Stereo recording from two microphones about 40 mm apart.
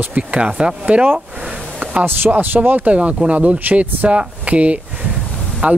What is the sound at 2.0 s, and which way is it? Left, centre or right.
Speech, right.